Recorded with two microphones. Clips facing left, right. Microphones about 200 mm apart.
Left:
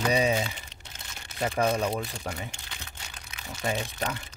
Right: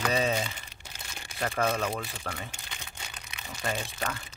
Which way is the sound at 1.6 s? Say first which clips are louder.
Left 3 dB; 15° left (ahead or behind).